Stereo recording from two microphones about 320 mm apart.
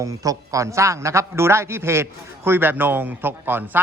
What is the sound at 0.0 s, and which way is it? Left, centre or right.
A man's voice, centre.